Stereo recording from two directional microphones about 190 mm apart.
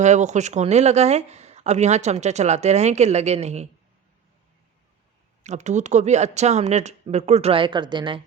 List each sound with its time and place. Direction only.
0.0 s speech: 40° right (ahead or behind)
5.4 s speech: 40° right (ahead or behind)